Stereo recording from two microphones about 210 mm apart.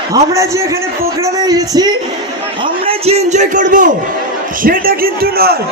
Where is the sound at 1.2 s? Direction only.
15° right (ahead or behind).